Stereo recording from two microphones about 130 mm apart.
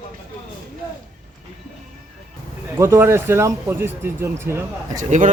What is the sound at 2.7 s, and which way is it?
A man's voice, 20° right (ahead or behind).